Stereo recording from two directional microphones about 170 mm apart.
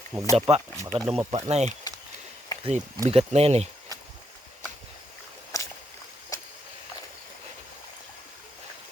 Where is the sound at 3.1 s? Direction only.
35° right (ahead or behind).